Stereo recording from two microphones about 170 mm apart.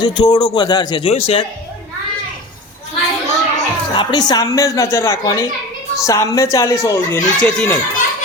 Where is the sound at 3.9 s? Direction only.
25° left (ahead or behind).